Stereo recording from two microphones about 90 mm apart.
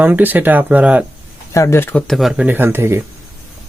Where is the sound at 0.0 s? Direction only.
20° right (ahead or behind).